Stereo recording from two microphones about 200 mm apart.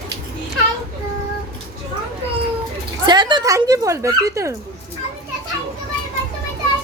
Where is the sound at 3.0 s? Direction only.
20° right (ahead or behind).